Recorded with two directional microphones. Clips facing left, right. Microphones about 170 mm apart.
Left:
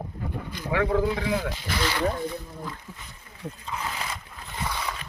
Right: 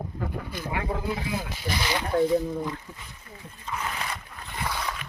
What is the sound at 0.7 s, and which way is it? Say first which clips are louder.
Speech: left 7 dB; 90° left.